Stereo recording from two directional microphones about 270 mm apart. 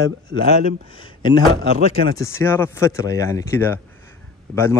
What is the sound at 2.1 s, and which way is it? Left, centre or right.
Speech, centre.